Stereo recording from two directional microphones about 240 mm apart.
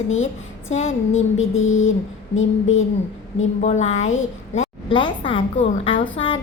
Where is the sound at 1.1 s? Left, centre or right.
Left.